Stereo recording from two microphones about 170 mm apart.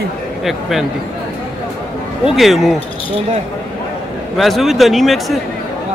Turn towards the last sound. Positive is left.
turn(degrees=0)  # may be behind; listen again after turning